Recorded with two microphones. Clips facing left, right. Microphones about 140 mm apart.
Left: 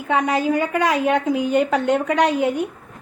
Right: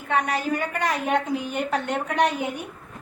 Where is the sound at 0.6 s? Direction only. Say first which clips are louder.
Left 7 dB; 90° left.